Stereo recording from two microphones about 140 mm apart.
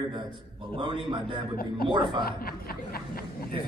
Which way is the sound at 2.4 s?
90° left.